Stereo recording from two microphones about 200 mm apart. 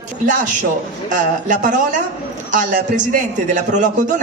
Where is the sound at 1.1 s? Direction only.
40° right (ahead or behind).